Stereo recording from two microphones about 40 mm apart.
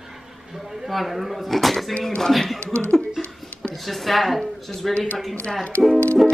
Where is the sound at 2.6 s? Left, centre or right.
Left.